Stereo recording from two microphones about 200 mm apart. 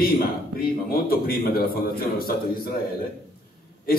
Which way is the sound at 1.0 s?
50° left (ahead or behind).